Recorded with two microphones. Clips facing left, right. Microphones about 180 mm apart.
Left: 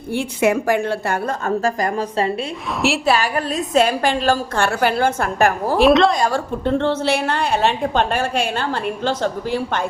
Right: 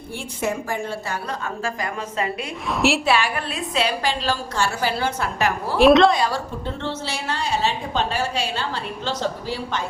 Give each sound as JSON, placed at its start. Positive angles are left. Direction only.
{"t": 0.1, "sound": "a woman's voice", "side_deg": 70}
{"t": 5.8, "sound": "a woman's voice", "side_deg": 0}
{"t": 6.1, "sound": "a woman's voice", "side_deg": 50}